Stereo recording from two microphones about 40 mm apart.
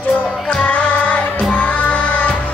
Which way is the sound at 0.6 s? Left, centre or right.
Left.